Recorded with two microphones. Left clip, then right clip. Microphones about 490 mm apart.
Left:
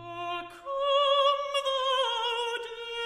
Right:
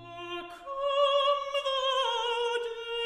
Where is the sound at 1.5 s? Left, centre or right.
Left.